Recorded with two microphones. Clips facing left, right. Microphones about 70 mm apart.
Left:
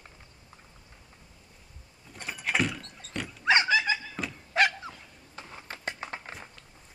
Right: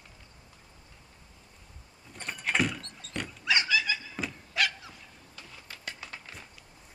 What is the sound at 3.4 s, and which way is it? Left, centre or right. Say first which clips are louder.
Thunk: left 5 dB; left.